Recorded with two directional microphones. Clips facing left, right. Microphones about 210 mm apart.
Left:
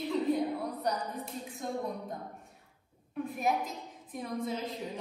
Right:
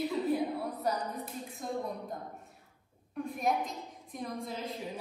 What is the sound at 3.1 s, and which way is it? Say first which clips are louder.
A woman's voice: even; centre (ahead or behind).